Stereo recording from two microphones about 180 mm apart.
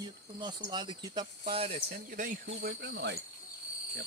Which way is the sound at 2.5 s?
70° right (ahead or behind).